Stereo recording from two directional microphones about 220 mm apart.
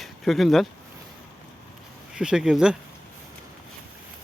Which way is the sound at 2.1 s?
5° right (ahead or behind).